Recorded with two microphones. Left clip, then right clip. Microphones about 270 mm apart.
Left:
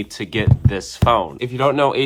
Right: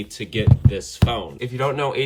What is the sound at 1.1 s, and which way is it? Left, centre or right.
Speech, centre.